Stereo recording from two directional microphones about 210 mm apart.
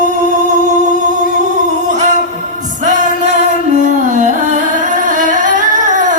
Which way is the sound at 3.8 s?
35° right (ahead or behind).